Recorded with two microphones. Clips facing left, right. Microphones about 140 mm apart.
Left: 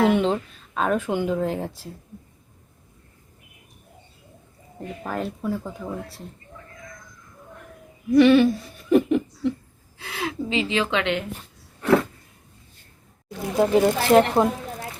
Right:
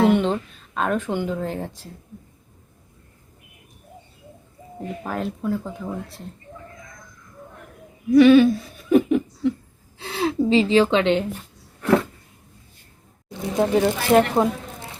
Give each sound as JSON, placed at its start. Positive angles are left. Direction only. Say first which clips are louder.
{"t": 0.1, "sound": "speech", "louder": "right 1 dB", "side_deg": 0}
{"t": 5.0, "sound": "speech", "louder": "right 1 dB", "side_deg": 0}
{"t": 8.1, "sound": "speech", "louder": "right 3 dB", "side_deg": 0}
{"t": 10.0, "sound": "speech", "louder": "right 7 dB", "side_deg": -30}
{"t": 13.2, "sound": "speech", "louder": "even", "side_deg": 5}